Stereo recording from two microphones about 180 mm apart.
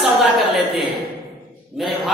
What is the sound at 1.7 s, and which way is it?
Speech, 5° right (ahead or behind).